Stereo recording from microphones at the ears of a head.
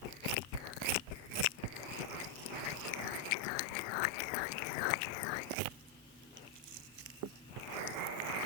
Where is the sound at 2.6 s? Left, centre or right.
Left.